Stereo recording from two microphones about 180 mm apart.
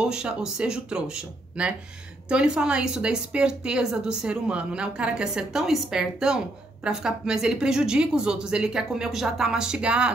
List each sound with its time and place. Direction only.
0.0 s a woman's voice: 5° right (ahead or behind)